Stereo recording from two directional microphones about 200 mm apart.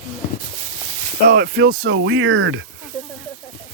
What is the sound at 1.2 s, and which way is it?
Speech, 50° right (ahead or behind).